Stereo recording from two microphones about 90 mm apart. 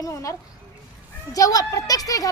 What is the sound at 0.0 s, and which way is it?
A child's voice, 35° left (ahead or behind).